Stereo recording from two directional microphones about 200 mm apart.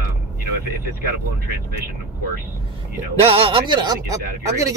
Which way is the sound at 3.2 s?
30° right (ahead or behind).